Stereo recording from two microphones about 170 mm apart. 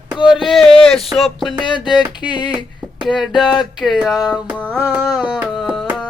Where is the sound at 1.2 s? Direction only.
Centre (ahead or behind).